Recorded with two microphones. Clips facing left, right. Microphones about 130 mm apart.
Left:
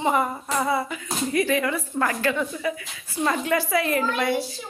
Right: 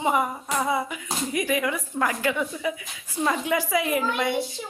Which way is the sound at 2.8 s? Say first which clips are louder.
Left 1 dB; 5° right (ahead or behind).